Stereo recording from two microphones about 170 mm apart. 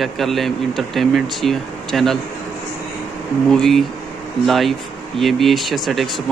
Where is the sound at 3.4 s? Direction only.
5° left (ahead or behind).